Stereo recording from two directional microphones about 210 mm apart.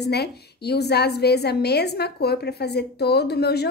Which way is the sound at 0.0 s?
50° left (ahead or behind).